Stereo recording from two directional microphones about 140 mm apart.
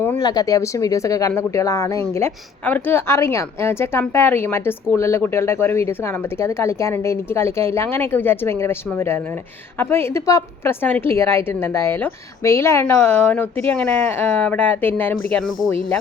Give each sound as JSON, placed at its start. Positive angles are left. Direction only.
{"t": 0.2, "sound": "a woman's voice", "side_deg": 25}